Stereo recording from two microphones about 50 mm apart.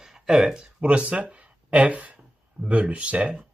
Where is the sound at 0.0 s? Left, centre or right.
Centre.